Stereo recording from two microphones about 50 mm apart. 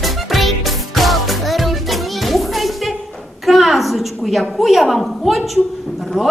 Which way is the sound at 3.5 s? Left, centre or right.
Centre.